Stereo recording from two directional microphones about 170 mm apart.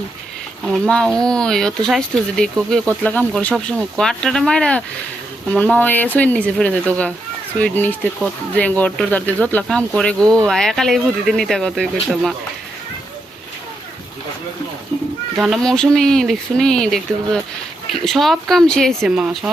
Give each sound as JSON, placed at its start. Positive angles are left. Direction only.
{"t": 0.6, "sound": "speech", "side_deg": 5}
{"t": 10.2, "sound": "speech", "side_deg": -20}
{"t": 10.4, "sound": "speech", "side_deg": 5}
{"t": 15.4, "sound": "speech", "side_deg": 0}